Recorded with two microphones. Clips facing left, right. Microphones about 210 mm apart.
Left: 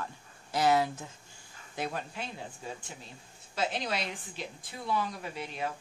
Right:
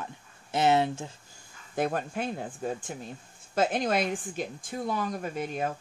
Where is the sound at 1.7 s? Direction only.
50° right (ahead or behind).